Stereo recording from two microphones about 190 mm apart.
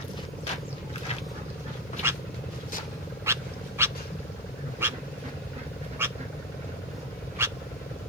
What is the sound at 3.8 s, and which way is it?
Wild animals, 10° right (ahead or behind).